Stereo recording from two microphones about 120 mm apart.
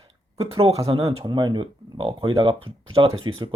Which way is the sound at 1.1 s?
40° right (ahead or behind).